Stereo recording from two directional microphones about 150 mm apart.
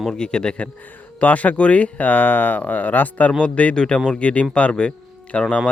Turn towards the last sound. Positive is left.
turn(degrees=5)  # may be behind; listen again after turning